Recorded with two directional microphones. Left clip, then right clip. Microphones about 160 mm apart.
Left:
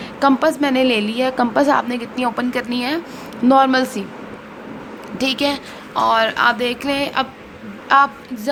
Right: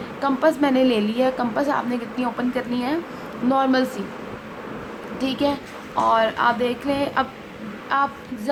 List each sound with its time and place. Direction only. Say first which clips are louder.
0.2 s a woman's voice: left 4 dB; 45° left (ahead or behind)
3.5 s a woman's voice: left 6 dB; 40° left (ahead or behind)
5.1 s a woman's voice: left 4 dB; 50° left (ahead or behind)